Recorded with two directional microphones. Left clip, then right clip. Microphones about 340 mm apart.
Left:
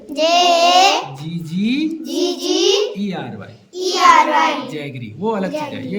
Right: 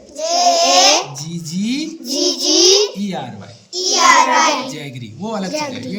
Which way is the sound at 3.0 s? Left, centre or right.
Centre.